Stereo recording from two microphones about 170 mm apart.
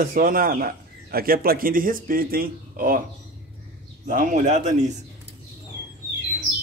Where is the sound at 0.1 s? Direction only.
55° right (ahead or behind).